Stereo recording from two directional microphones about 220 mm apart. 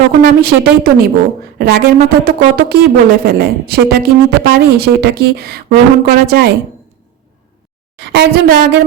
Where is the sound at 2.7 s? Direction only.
45° right (ahead or behind).